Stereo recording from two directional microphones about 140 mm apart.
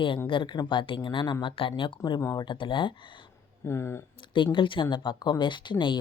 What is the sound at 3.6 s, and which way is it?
Speech, 20° left (ahead or behind).